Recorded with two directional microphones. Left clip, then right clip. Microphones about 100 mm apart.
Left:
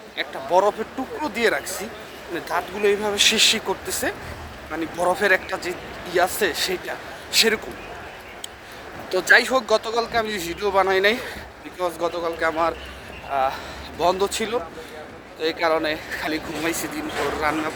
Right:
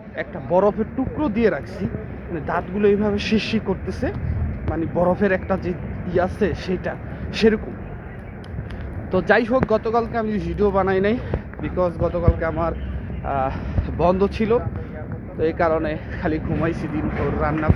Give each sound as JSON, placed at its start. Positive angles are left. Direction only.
{"t": 0.2, "sound": "speech", "side_deg": 50}
{"t": 6.1, "sound": "speech", "side_deg": 40}
{"t": 9.1, "sound": "speech", "side_deg": 55}
{"t": 13.3, "sound": "speech", "side_deg": 70}
{"t": 14.0, "sound": "speech", "side_deg": 40}